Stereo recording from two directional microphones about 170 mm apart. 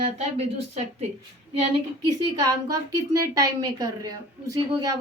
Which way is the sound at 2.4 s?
20° right (ahead or behind).